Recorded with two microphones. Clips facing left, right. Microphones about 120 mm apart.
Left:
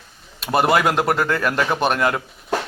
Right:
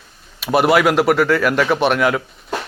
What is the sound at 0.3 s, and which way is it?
Speech, 5° right (ahead or behind).